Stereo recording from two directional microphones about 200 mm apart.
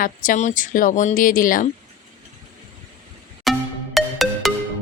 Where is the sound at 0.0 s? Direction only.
40° left (ahead or behind).